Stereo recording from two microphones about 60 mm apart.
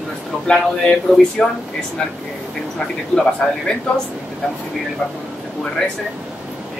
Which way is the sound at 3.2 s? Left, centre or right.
Centre.